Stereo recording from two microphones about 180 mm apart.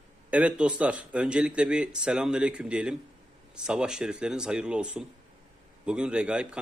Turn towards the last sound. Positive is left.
turn(degrees=-5)  # may be behind; listen again after turning